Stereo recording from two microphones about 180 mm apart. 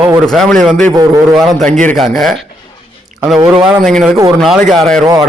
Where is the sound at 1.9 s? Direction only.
Centre (ahead or behind).